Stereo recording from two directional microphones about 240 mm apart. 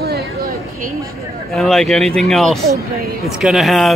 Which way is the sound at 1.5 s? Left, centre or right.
Centre.